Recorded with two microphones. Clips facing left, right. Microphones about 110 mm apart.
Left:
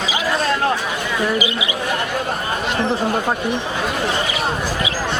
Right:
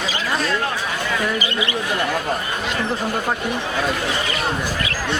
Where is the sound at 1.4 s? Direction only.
15° left (ahead or behind).